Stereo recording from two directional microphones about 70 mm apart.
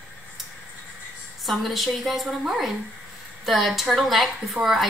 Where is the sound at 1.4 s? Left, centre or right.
Centre.